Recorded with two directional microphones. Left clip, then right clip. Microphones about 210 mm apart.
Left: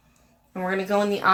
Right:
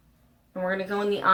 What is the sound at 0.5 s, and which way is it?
Speech, 40° left (ahead or behind).